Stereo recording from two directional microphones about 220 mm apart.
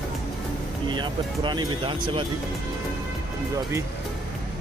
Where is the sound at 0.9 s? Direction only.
20° right (ahead or behind).